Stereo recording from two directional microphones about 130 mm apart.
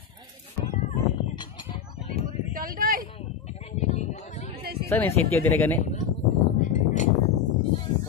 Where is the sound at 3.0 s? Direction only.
50° left (ahead or behind).